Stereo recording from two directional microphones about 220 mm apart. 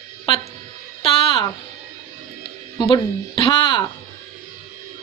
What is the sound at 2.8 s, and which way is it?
Speech, 20° left (ahead or behind).